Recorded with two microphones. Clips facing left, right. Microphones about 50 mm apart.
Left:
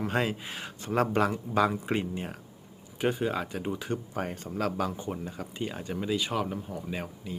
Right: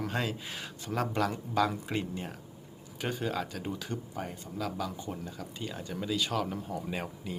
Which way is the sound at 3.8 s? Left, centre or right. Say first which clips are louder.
Left 5 dB; left.